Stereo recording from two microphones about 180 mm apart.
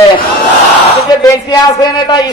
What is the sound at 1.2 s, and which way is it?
A man's voice, 25° left (ahead or behind).